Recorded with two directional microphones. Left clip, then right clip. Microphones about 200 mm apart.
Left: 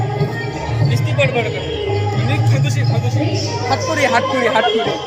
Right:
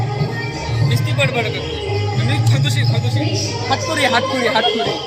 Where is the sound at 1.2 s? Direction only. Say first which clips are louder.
Left 2 dB; 20° right (ahead or behind).